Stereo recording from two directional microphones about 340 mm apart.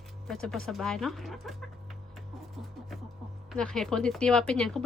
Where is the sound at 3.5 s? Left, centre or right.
Centre.